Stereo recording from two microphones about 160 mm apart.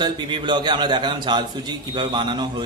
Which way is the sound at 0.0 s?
30° right (ahead or behind).